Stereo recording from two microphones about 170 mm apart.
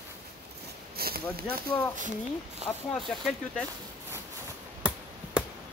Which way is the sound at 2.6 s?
40° right (ahead or behind).